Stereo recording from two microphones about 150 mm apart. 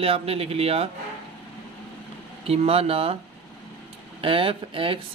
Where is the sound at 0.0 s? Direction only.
40° right (ahead or behind).